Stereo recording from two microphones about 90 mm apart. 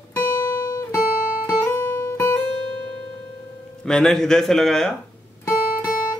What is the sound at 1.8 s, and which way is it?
Music, 30° left (ahead or behind).